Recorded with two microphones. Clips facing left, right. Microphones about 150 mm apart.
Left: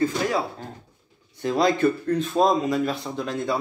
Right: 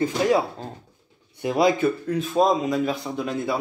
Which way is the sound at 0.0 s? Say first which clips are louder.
Right 3 dB; 20° right (ahead or behind).